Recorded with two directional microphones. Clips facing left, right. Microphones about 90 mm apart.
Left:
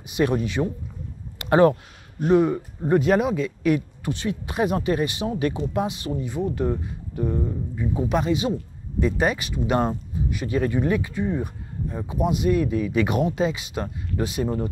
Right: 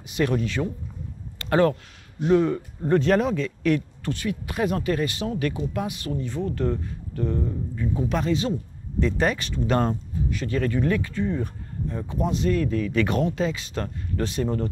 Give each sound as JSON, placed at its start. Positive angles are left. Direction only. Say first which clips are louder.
{"t": 0.0, "sound": "a man's voice", "louder": "left 2 dB", "side_deg": 20}